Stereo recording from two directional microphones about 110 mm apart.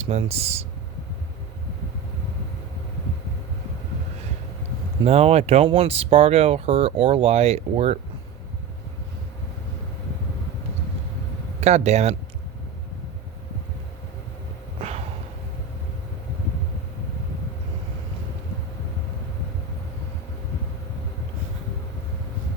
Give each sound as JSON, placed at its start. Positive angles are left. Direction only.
{"t": 0.1, "sound": "speech", "side_deg": -70}
{"t": 5.0, "sound": "speech", "side_deg": -75}
{"t": 11.6, "sound": "speech", "side_deg": -85}
{"t": 14.8, "sound": "a sound", "side_deg": -75}